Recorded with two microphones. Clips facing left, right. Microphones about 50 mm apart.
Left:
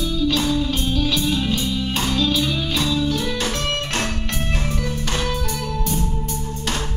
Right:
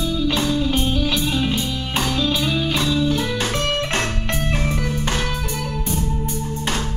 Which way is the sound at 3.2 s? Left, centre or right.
Centre.